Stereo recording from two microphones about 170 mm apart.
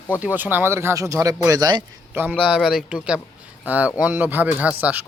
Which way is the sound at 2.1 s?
10° right (ahead or behind).